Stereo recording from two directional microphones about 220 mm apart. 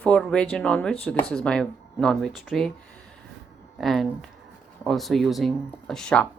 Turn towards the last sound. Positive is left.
turn(degrees=5)  # may be behind; listen again after turning